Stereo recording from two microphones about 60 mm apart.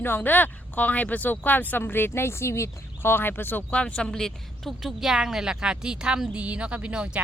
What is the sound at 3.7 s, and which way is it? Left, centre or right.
Speech, centre.